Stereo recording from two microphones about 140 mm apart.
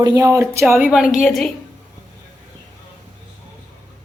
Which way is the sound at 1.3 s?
5° left (ahead or behind).